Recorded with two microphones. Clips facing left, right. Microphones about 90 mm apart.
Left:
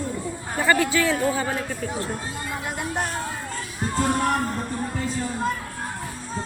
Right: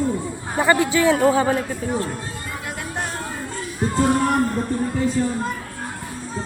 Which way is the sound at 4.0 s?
Centre (ahead or behind).